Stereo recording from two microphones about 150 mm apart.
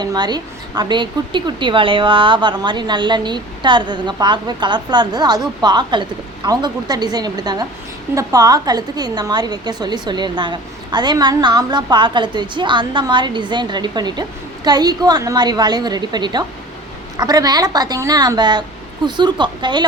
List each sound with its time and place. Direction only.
0.0 s a woman's voice: 30° right (ahead or behind)